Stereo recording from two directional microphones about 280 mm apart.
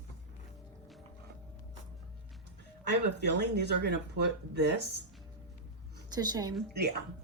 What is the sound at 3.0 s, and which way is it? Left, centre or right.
Speech, right.